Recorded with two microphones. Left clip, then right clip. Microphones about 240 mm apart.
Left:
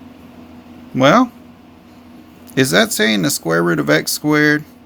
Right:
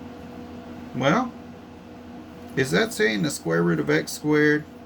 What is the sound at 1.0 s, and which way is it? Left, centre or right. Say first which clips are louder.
Speech: left 11 dB; left.